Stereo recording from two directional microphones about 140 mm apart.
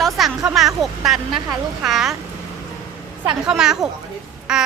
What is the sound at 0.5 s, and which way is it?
A woman's voice, centre (ahead or behind).